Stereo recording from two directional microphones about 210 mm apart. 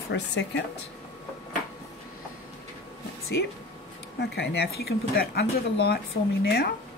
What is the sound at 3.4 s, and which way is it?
Speech, 55° left (ahead or behind).